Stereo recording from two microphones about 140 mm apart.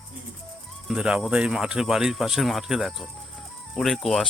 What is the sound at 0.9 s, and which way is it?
Speech, 5° right (ahead or behind).